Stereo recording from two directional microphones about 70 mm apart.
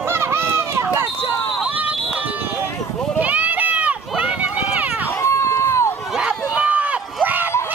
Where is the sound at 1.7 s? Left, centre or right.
Right.